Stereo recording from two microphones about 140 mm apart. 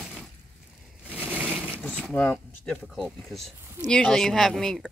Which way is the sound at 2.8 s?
Centre (ahead or behind).